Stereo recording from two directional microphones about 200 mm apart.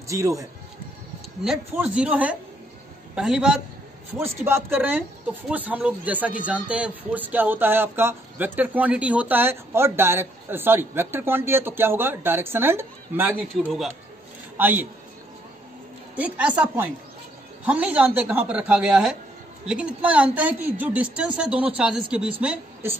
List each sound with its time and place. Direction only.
0.1 s speech: 15° right (ahead or behind)
1.4 s a man's voice: 5° right (ahead or behind)
16.2 s speech: 5° right (ahead or behind)